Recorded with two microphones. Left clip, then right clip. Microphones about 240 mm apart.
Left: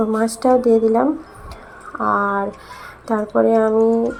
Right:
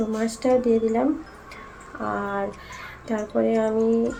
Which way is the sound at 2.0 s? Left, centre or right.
Centre.